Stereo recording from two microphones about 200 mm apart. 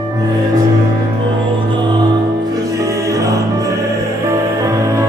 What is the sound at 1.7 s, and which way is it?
Music, 25° right (ahead or behind).